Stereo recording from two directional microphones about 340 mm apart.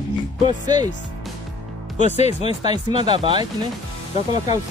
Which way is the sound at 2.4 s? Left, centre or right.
Centre.